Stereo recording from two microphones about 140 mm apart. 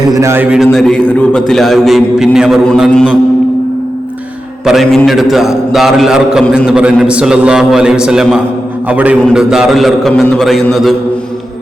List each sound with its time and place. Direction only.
0.0 s a man's voice: 25° right (ahead or behind)
0.5 s a man's voice: centre (ahead or behind)
4.6 s a man's voice: centre (ahead or behind)